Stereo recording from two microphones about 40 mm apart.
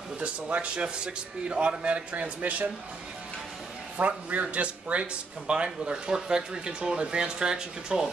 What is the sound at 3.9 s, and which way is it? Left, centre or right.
Speech, right.